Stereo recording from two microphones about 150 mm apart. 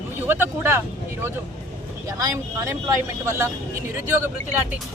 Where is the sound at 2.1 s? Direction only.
20° right (ahead or behind).